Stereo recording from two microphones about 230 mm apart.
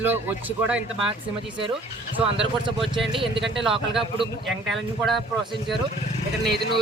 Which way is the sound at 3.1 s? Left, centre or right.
Right.